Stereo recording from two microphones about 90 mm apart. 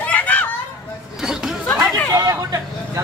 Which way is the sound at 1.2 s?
5° right (ahead or behind).